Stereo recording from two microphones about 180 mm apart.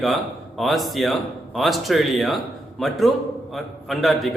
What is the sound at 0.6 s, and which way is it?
A man's voice, centre (ahead or behind).